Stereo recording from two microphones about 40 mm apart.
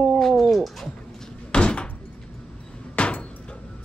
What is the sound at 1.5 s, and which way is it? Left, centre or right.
Door, left.